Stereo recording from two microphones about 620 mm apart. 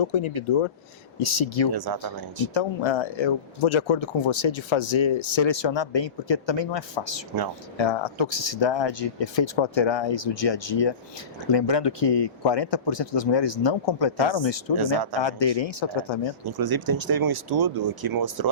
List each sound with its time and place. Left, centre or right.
0.0 s speech: left
1.7 s speech: right
2.5 s speech: left
16.5 s speech: right